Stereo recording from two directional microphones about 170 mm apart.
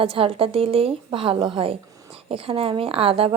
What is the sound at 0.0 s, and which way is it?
A woman's voice, 30° right (ahead or behind).